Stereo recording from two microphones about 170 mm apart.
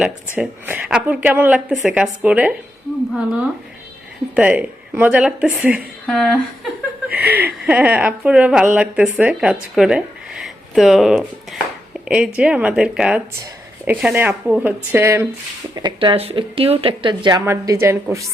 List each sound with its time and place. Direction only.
0.3 s speech: 10° right (ahead or behind)
4.4 s speech: 5° right (ahead or behind)
6.1 s speech: 5° left (ahead or behind)
7.2 s speech: 10° right (ahead or behind)
15.7 s speech: 25° right (ahead or behind)
17.4 s speech: 15° right (ahead or behind)